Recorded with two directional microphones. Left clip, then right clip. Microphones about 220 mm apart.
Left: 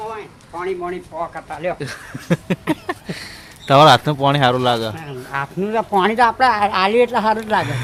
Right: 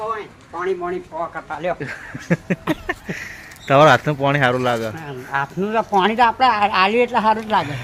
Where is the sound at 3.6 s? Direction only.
15° left (ahead or behind).